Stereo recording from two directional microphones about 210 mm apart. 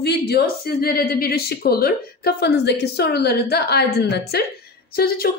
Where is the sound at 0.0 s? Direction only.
50° left (ahead or behind).